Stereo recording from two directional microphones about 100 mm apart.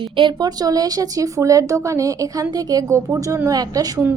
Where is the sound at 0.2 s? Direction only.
45° right (ahead or behind).